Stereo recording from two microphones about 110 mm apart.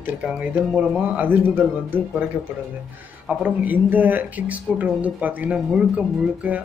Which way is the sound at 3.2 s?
10° right (ahead or behind).